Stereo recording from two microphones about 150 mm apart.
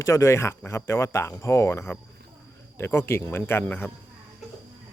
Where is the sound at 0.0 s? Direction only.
20° left (ahead or behind).